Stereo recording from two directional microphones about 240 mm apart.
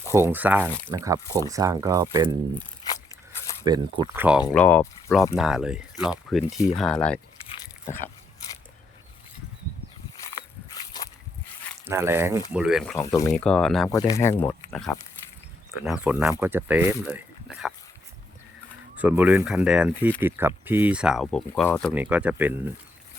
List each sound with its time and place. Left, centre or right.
0.1 s speech: centre
3.6 s speech: centre
4.5 s speech: centre
5.3 s speech: centre
7.4 s a sound: left
10.3 s a sound: centre
11.9 s speech: centre
13.0 s speech: centre
13.9 s speech: centre
15.8 s speech: centre
18.9 s speech: centre
21.9 s speech: centre